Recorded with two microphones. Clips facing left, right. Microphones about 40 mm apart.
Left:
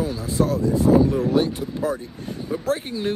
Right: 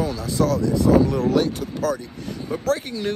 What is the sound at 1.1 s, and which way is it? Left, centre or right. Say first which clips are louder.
Speech: even; right.